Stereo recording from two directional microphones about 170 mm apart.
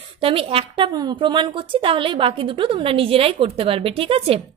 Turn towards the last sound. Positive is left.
turn(degrees=-35)  # may be behind; listen again after turning